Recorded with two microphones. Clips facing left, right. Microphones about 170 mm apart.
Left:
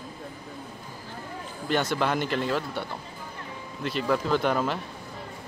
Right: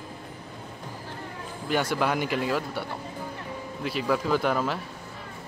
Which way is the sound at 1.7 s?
10° right (ahead or behind).